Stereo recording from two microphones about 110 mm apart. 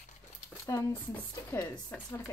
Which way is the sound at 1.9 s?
15° left (ahead or behind).